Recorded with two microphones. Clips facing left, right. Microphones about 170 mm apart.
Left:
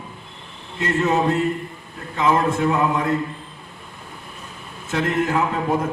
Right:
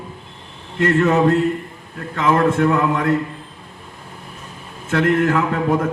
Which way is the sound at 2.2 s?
60° right (ahead or behind).